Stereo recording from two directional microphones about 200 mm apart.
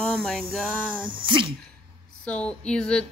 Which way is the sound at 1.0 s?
25° right (ahead or behind).